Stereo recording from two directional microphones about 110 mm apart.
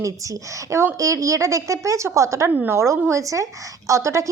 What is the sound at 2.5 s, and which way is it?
A woman's voice, 15° right (ahead or behind).